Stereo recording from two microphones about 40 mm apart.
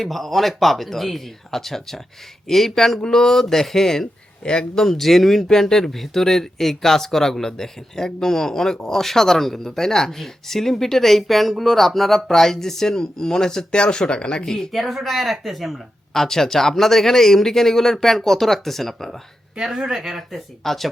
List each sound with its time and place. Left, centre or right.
0.0 s speech: centre
4.8 s speech: centre
14.7 s speech: centre
16.1 s speech: centre
19.5 s speech: centre
20.7 s speech: centre